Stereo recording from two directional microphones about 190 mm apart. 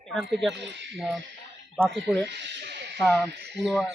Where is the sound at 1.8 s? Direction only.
Centre (ahead or behind).